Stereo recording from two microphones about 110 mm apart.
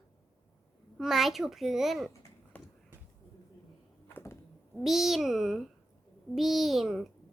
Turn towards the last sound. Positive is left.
turn(degrees=0)  # may be behind; listen again after turning